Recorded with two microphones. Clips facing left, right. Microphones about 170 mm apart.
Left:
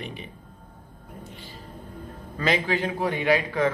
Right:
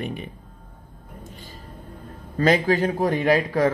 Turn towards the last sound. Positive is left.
turn(degrees=-40)  # may be behind; listen again after turning